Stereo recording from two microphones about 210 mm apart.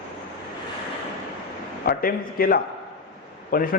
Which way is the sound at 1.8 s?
45° left (ahead or behind).